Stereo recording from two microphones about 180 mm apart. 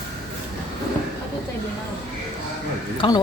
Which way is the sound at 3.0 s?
30° left (ahead or behind).